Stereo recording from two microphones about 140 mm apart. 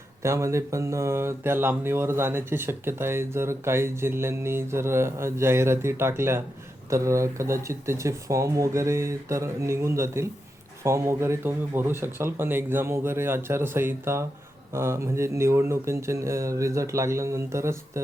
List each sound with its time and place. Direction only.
0.2 s speech: 20° right (ahead or behind)